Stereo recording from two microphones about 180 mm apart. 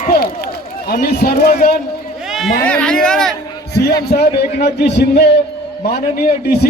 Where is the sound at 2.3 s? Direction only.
Centre (ahead or behind).